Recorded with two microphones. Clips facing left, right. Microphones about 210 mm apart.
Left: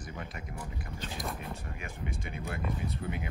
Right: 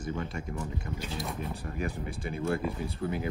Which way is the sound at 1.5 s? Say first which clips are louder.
Right 7 dB; 35° right (ahead or behind).